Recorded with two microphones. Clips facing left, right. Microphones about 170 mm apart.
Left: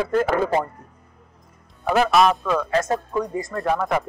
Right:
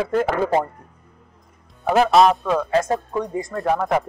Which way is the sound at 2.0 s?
25° right (ahead or behind).